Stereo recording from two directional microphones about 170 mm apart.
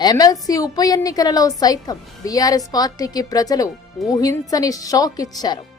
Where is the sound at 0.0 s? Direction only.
20° left (ahead or behind).